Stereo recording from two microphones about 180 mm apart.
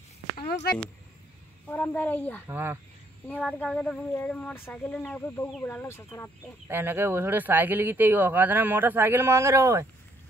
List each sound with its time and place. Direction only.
0.4 s a sound: 60° left (ahead or behind)
1.7 s speech: 10° left (ahead or behind)
2.4 s speech: 10° right (ahead or behind)
3.3 s speech: 10° left (ahead or behind)
6.7 s speech: 10° right (ahead or behind)